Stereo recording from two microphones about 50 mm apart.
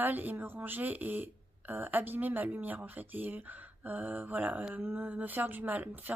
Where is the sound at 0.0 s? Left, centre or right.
Right.